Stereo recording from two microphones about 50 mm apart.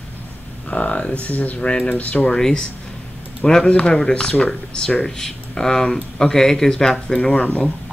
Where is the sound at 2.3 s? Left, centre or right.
Centre.